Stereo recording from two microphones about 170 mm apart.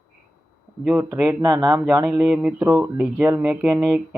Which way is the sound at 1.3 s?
20° right (ahead or behind).